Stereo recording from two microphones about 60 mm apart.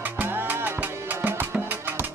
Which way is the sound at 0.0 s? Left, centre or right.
Right.